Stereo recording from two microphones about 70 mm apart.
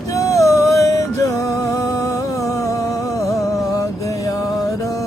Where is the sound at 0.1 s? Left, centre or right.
Left.